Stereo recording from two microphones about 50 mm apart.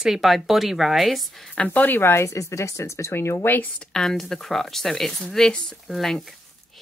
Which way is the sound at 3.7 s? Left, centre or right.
Centre.